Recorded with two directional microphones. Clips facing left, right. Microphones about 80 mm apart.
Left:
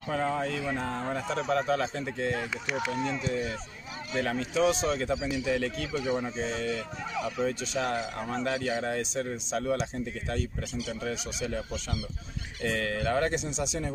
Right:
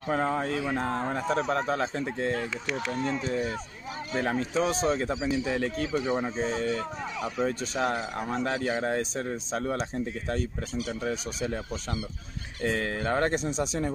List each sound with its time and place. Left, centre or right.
0.1 s speech: right
0.7 s speech: right
2.3 s speech: centre
2.9 s speech: right
6.3 s speech: right